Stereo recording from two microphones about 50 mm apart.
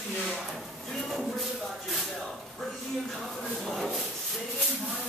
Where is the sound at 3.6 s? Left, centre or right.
Centre.